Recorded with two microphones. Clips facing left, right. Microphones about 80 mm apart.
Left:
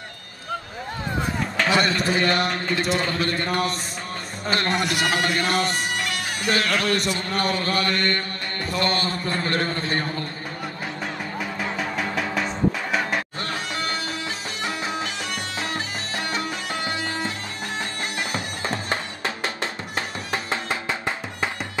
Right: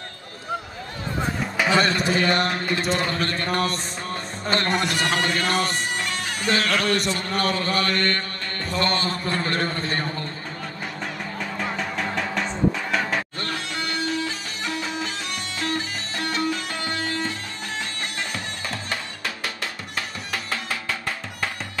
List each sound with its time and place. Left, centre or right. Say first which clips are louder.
1.7 s speech: right 1 dB; centre
11.3 s music: even; centre
18.3 s music: left 3 dB; left